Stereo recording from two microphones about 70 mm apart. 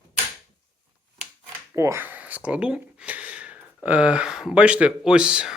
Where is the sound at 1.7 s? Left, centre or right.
Right.